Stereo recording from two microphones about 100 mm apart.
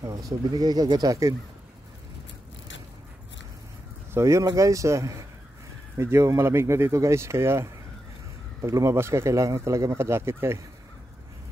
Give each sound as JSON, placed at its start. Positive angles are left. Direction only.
{"t": 0.5, "sound": "speech", "side_deg": -45}
{"t": 4.1, "sound": "speech", "side_deg": -30}